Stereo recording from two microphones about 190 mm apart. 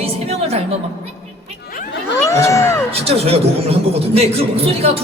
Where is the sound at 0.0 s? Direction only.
30° right (ahead or behind).